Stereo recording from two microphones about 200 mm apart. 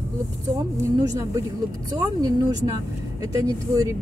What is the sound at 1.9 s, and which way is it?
Speech, 15° right (ahead or behind).